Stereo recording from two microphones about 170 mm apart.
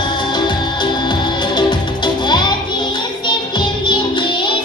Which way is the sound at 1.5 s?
25° left (ahead or behind).